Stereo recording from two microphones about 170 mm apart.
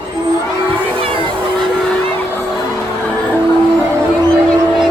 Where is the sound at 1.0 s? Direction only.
30° right (ahead or behind).